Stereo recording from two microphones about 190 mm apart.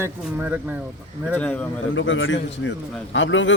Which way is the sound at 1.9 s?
80° left.